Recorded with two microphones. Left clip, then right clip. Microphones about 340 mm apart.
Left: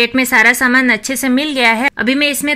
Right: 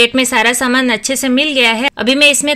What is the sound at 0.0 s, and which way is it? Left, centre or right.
A woman's voice, centre.